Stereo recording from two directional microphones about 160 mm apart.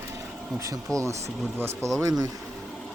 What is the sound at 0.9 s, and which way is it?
Speech, 20° right (ahead or behind).